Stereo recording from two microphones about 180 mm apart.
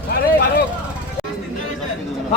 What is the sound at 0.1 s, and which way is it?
Vehicle, 60° left (ahead or behind).